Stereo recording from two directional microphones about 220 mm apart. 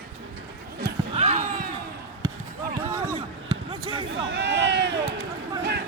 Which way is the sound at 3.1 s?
25° right (ahead or behind).